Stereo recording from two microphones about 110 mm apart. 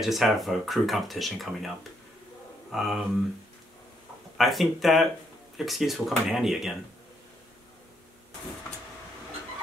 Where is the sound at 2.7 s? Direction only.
Centre (ahead or behind).